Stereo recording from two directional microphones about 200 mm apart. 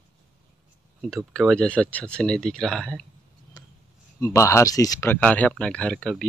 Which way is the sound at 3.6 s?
20° left (ahead or behind).